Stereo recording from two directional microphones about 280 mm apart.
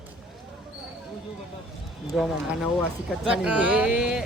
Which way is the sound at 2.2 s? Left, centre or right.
Centre.